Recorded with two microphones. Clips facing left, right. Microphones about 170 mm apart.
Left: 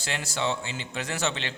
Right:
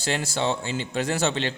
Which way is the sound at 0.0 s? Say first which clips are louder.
Right 4 dB; 30° right (ahead or behind).